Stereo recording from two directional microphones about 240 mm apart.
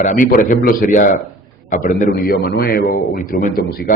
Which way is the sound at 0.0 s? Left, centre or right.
Left.